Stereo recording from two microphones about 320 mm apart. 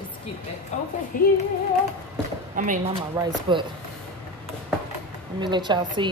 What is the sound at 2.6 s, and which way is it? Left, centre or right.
Speech, right.